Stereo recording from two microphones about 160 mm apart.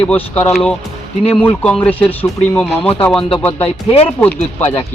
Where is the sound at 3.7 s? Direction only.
40° left (ahead or behind).